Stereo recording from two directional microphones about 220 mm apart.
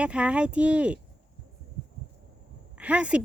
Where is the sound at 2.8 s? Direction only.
5° right (ahead or behind).